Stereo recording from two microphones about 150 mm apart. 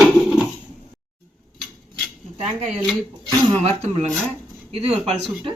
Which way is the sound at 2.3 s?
45° right (ahead or behind).